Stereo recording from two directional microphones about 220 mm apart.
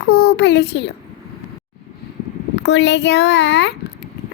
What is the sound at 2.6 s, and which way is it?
A child's voice, 50° left (ahead or behind).